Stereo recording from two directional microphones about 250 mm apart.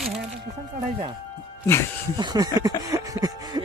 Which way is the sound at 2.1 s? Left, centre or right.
Centre.